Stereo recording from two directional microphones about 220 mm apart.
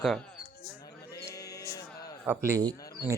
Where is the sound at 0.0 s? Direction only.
Centre (ahead or behind).